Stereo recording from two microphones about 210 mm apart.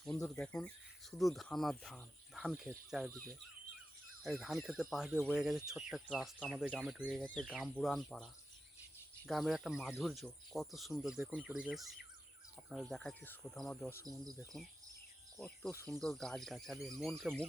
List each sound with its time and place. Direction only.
0.3 s speech: 5° left (ahead or behind)
4.2 s speech: centre (ahead or behind)
14.0 s speech: 20° right (ahead or behind)
15.4 s speech: 5° left (ahead or behind)